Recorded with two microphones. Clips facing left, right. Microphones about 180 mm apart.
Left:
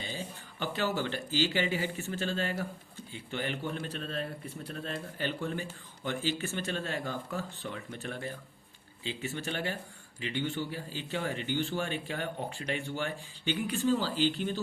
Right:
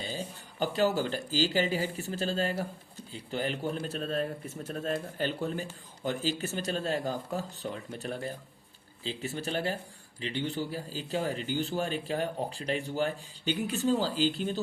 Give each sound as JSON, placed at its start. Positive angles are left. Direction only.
{"t": 0.0, "sound": "a man's voice", "side_deg": -40}